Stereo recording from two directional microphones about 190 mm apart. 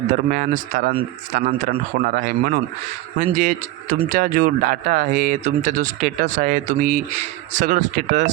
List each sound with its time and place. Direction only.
0.1 s speech: 45° right (ahead or behind)